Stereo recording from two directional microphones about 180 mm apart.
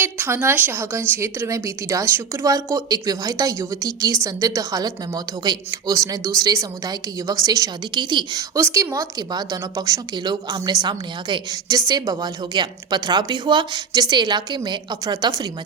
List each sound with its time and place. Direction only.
0.0 s a woman's voice: 10° right (ahead or behind)